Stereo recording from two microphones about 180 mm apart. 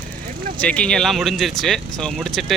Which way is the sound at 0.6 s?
5° left (ahead or behind).